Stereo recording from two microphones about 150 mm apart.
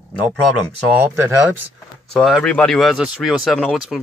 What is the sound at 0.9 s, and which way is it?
Speech, 15° right (ahead or behind).